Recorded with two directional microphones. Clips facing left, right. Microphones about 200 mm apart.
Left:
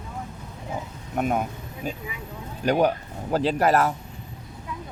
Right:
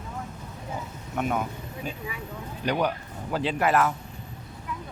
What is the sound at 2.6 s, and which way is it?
Speech, 45° left (ahead or behind).